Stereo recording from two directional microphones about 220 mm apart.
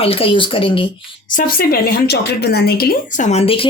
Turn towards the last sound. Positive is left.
turn(degrees=25)  # may be behind; listen again after turning